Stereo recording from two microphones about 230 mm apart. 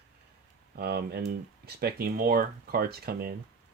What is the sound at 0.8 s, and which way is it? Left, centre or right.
Speech, right.